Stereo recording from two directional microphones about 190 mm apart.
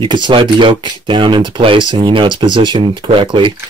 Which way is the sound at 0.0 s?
25° right (ahead or behind).